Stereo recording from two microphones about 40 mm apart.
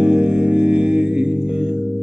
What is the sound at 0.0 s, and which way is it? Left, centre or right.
Music, centre.